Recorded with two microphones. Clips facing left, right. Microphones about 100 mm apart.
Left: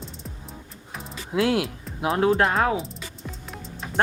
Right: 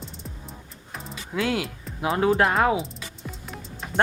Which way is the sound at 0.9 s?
Centre (ahead or behind).